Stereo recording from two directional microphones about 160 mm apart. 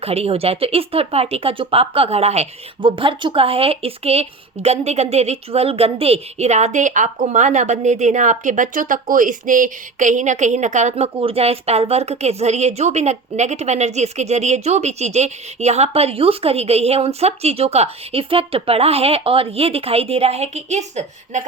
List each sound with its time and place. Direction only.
0.0 s speech: 40° right (ahead or behind)
2.8 s speech: 30° right (ahead or behind)